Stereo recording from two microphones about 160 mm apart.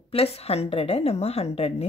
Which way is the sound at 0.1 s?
40° left (ahead or behind).